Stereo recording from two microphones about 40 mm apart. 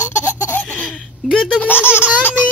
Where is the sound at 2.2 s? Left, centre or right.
Left.